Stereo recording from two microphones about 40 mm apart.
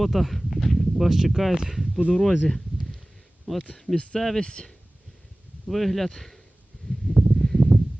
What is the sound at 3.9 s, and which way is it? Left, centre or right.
Speech, left.